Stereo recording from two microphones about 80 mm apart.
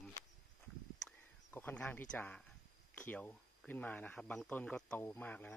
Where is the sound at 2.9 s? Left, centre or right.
Centre.